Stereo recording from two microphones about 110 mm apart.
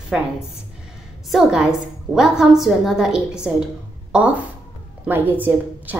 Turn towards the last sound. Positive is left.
turn(degrees=-15)  # may be behind; listen again after turning